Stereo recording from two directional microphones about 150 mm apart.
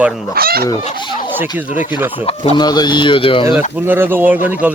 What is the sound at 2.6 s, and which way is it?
Speech, 30° left (ahead or behind).